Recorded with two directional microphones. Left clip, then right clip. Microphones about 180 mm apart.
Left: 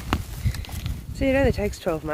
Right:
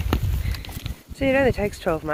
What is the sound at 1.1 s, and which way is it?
Speech, 20° left (ahead or behind).